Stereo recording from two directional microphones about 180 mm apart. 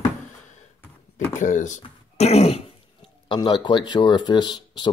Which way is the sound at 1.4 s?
45° left (ahead or behind).